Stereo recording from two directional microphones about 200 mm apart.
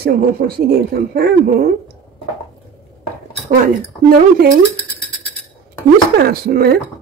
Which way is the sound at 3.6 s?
45° right (ahead or behind).